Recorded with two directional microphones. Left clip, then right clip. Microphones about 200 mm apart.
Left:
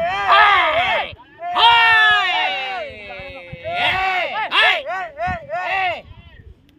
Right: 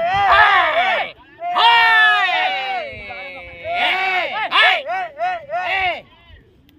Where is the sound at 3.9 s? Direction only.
10° left (ahead or behind).